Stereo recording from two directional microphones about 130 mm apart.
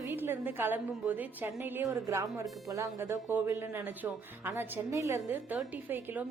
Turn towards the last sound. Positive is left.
turn(degrees=-15)  # may be behind; listen again after turning